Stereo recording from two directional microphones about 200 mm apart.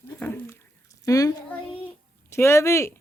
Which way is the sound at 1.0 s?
15° left (ahead or behind).